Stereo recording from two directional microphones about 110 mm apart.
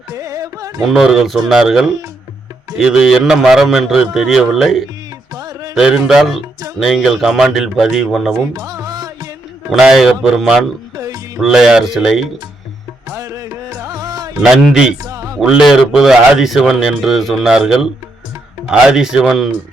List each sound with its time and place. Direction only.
0.1 s music: 30° right (ahead or behind)
0.9 s a man's voice: centre (ahead or behind)
5.3 s music: 35° right (ahead or behind)
5.7 s a man's voice: 5° right (ahead or behind)
8.5 s music: 35° right (ahead or behind)
9.7 s a man's voice: 5° right (ahead or behind)
10.9 s music: 30° right (ahead or behind)
11.3 s a man's voice: 5° right (ahead or behind)
13.1 s music: 30° right (ahead or behind)
14.4 s a man's voice: 5° right (ahead or behind)
15.0 s music: 30° right (ahead or behind)
15.4 s a man's voice: 5° right (ahead or behind)